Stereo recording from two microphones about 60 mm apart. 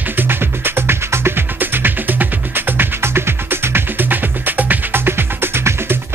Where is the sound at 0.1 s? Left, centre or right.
Right.